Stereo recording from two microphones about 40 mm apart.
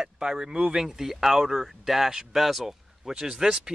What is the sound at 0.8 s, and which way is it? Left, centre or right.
Speech, centre.